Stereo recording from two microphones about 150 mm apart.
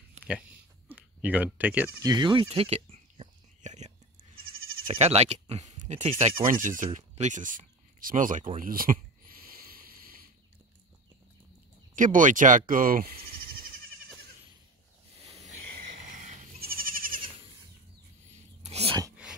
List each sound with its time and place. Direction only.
0.8 s bleat: 10° right (ahead or behind)
2.0 s whispering: 30° right (ahead or behind); by 3.9 s 50° right (ahead or behind)
4.8 s speech: 45° right (ahead or behind)
6.0 s speech: 40° right (ahead or behind)
6.6 s speech: 60° right (ahead or behind)
9.5 s boat: 75° right (ahead or behind)
11.9 s speech: 60° right (ahead or behind)
15.2 s a sound: 45° right (ahead or behind)
16.2 s goat: 70° right (ahead or behind)
18.6 s dog: 45° right (ahead or behind)